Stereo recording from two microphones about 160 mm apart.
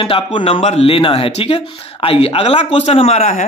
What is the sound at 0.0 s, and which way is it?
Speech, 35° left (ahead or behind).